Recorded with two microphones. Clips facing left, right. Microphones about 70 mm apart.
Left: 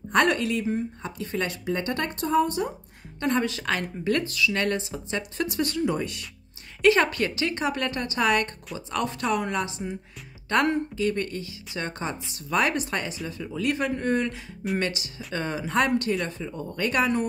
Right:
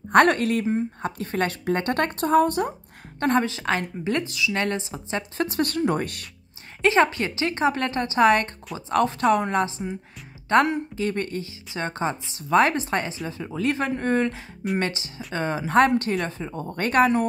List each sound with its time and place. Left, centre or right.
0.1 s speech: right
3.3 s a woman's voice: right
5.8 s speech: right
6.8 s a woman's voice: right